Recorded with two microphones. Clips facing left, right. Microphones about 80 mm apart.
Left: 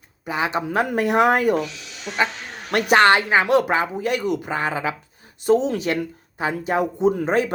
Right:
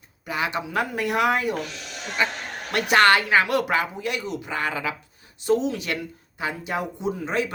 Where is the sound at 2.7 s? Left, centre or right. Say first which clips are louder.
Left 4 dB; left.